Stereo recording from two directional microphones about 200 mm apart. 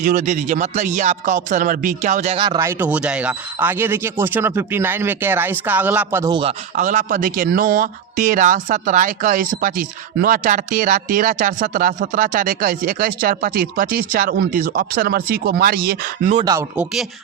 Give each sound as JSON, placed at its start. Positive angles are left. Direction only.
{"t": 0.0, "sound": "speech", "side_deg": -40}
{"t": 6.7, "sound": "speech", "side_deg": -40}
{"t": 16.3, "sound": "speech", "side_deg": -20}